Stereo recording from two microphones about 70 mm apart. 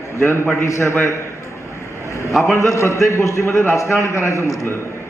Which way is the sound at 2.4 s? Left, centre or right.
Left.